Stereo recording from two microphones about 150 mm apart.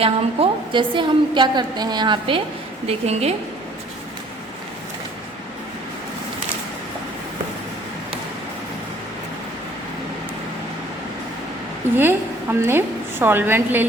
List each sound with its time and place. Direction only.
0.0 s a woman's voice: 35° right (ahead or behind)
11.9 s a woman's voice: 15° right (ahead or behind)